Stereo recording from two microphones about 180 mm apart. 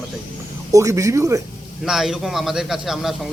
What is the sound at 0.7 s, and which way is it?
Speech, 15° right (ahead or behind).